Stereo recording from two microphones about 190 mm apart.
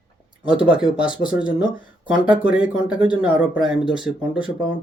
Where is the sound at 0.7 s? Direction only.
25° left (ahead or behind).